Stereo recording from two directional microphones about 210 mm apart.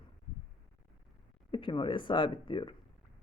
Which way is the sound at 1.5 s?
25° left (ahead or behind).